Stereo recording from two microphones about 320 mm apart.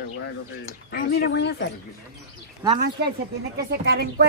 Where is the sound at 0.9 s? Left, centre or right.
Left.